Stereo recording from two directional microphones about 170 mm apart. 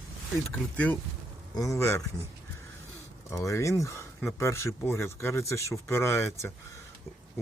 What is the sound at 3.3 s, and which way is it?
Speech, 20° left (ahead or behind).